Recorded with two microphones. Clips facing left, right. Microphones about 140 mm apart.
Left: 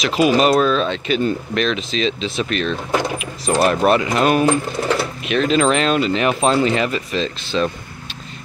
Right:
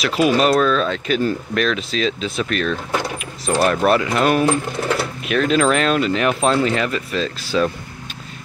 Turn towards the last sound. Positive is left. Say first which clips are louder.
# right 1 dB
turn(degrees=-5)  # may be behind; listen again after turning